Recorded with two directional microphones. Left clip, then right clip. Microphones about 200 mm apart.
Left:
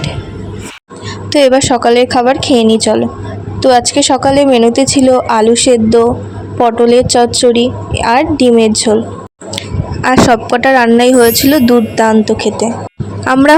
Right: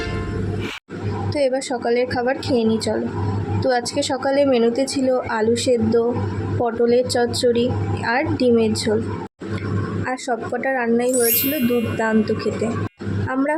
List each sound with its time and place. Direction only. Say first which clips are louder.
1.3 s a woman's voice: left 13 dB; 40° left (ahead or behind)
10.0 s speech: left 17 dB; 45° left (ahead or behind)
13.2 s speech: left 15 dB; 50° left (ahead or behind)